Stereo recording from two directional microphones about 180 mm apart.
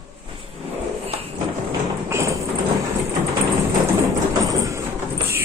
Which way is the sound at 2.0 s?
15° right (ahead or behind).